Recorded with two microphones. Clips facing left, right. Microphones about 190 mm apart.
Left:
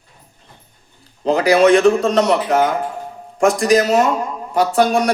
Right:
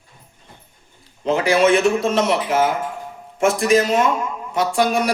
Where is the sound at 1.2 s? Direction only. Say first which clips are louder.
Left 4 dB; 35° left (ahead or behind).